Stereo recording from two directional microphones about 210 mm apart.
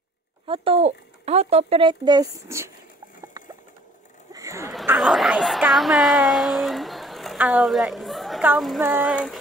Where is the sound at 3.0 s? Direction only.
15° right (ahead or behind).